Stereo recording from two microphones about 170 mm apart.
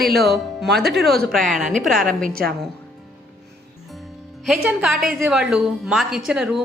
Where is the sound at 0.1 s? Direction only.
70° right (ahead or behind).